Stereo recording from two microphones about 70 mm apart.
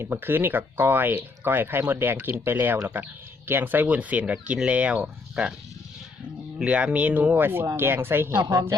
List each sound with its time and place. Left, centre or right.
0.0 s speech: right; by 5.5 s centre
6.7 s speech: centre; by 8.4 s right
8.4 s a woman's voice: right